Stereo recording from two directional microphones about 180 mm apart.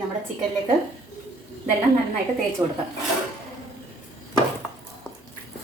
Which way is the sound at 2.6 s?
20° right (ahead or behind).